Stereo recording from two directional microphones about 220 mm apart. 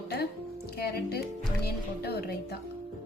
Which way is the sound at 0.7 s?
45° left (ahead or behind).